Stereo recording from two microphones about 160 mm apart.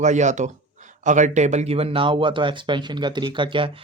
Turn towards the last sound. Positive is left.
turn(degrees=-35)  # may be behind; listen again after turning